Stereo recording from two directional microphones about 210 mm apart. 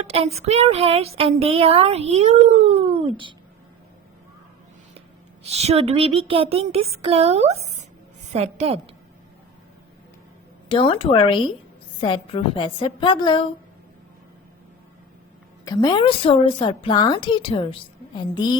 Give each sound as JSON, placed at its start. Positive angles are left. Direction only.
{"t": 0.0, "sound": "speech", "side_deg": -30}
{"t": 5.5, "sound": "a woman's voice", "side_deg": -30}
{"t": 10.7, "sound": "a woman's voice", "side_deg": 25}
{"t": 15.6, "sound": "a woman's voice", "side_deg": 20}